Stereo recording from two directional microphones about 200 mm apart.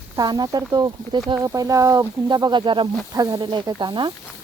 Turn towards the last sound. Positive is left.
turn(degrees=-20)  # may be behind; listen again after turning